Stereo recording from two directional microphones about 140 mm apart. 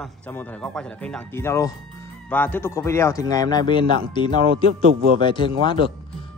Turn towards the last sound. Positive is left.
turn(degrees=35)  # may be behind; listen again after turning